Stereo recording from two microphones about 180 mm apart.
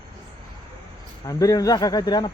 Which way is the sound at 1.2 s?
20° left (ahead or behind).